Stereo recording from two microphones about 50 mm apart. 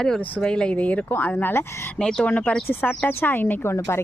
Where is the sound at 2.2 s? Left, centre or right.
Left.